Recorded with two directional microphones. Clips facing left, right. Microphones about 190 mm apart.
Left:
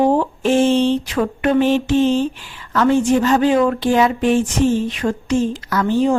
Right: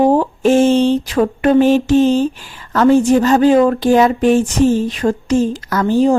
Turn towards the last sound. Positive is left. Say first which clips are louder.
# right 3 dB
turn(degrees=-40)  # may be behind; listen again after turning